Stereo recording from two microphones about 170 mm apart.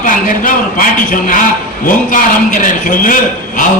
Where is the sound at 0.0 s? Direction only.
50° left (ahead or behind).